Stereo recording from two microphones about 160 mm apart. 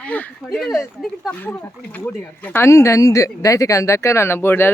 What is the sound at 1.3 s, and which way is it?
Speech, 10° left (ahead or behind).